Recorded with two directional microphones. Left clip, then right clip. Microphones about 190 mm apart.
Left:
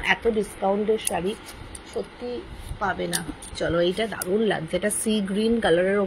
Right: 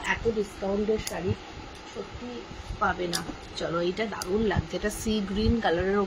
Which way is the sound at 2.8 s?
25° left (ahead or behind).